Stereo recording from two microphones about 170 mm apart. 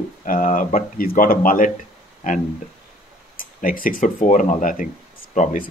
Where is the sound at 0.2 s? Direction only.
50° left (ahead or behind).